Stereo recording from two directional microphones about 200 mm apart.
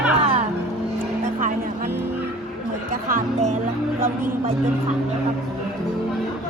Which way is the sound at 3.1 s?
45° right (ahead or behind).